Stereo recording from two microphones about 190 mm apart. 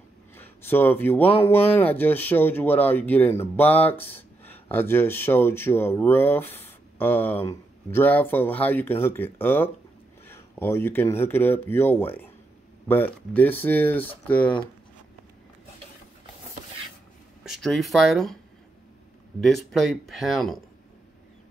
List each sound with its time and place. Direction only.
0.4 s speech: 10° left (ahead or behind)
17.4 s speech: centre (ahead or behind)
19.4 s speech: centre (ahead or behind)